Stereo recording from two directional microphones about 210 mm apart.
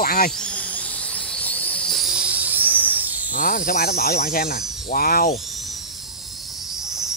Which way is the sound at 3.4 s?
40° left (ahead or behind).